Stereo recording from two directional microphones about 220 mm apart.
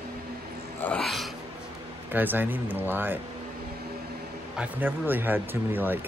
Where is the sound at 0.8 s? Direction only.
Centre (ahead or behind).